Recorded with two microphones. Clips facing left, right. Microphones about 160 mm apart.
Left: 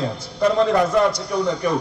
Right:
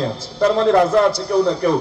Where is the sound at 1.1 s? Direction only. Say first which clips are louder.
Right 5 dB; 30° right (ahead or behind).